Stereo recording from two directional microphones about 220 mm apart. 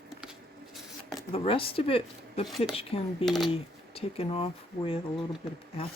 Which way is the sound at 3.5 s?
25° left (ahead or behind).